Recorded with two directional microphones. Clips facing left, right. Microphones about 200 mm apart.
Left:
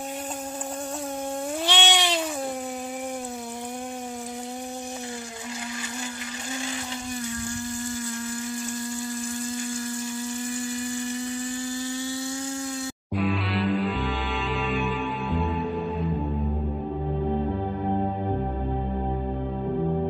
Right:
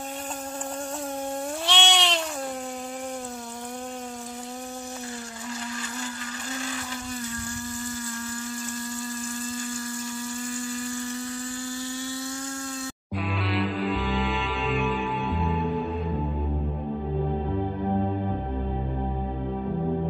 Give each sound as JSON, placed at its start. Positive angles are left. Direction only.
{"t": 1.7, "sound": "cat", "side_deg": 5}
{"t": 10.5, "sound": "electric toothbrush", "side_deg": 20}
{"t": 13.1, "sound": "music", "side_deg": 0}